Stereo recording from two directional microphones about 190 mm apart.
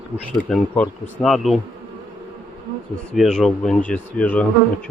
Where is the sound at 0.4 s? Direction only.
5° left (ahead or behind).